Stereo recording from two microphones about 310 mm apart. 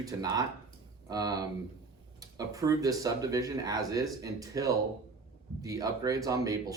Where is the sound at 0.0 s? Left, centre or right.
Centre.